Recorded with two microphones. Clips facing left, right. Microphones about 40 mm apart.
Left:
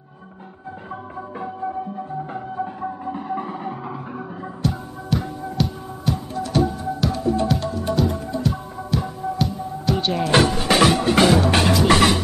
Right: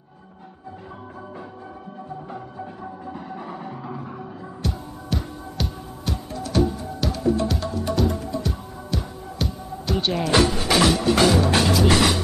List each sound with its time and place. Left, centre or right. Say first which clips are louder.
2.2 s music: left 7 dB; left
4.6 s music: left 5 dB; centre
10.3 s music: left 2 dB; left
11.9 s speech: left 3 dB; left